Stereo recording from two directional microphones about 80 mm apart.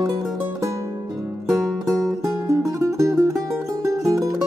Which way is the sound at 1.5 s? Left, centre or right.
Right.